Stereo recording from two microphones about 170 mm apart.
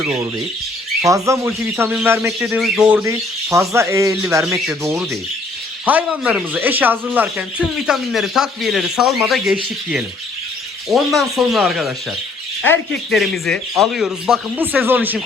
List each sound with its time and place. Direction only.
1.0 s speech: 20° right (ahead or behind)
2.6 s speech: centre (ahead or behind)
3.0 s speech: 15° right (ahead or behind)
5.8 s speech: 10° right (ahead or behind)
12.6 s speech: 10° left (ahead or behind)
13.1 s speech: centre (ahead or behind)